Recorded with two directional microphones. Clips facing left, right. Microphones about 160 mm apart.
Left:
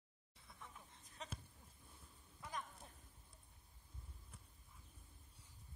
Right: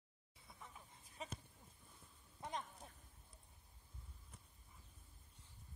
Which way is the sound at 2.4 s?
25° right (ahead or behind).